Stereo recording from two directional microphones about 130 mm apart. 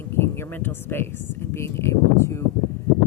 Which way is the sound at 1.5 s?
20° left (ahead or behind).